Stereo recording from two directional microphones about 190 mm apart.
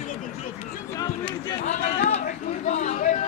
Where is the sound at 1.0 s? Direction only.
25° left (ahead or behind).